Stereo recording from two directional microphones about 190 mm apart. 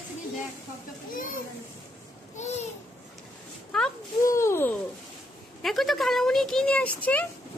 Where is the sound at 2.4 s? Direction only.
35° left (ahead or behind).